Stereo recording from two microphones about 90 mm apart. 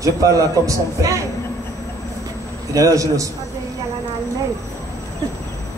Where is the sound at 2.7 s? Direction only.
40° right (ahead or behind).